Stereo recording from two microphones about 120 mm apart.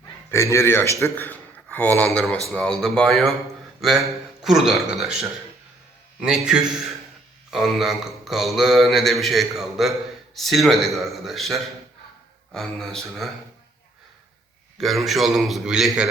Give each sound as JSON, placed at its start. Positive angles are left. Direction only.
{"t": 0.3, "sound": "a man's voice", "side_deg": 20}
{"t": 2.0, "sound": "mantra", "side_deg": 5}
{"t": 6.1, "sound": "a man's voice", "side_deg": -5}
{"t": 7.5, "sound": "mantra", "side_deg": 0}
{"t": 14.8, "sound": "mantra", "side_deg": 0}